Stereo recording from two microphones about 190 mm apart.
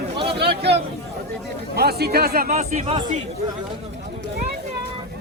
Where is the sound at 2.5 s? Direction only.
35° right (ahead or behind).